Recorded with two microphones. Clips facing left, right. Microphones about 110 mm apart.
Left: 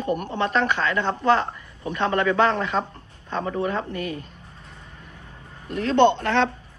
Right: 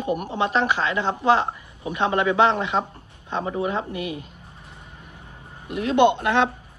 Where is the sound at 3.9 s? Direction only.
40° left (ahead or behind).